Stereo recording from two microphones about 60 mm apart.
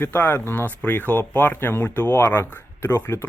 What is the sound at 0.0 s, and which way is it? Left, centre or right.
Speech, left.